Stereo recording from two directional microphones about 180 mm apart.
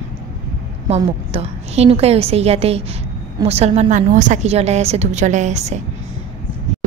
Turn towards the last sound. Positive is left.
turn(degrees=-40)  # may be behind; listen again after turning